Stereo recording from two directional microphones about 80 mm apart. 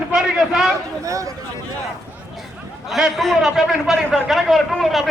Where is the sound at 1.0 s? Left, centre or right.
Right.